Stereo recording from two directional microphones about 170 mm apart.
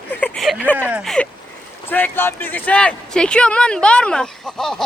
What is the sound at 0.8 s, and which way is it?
Speech, 5° right (ahead or behind).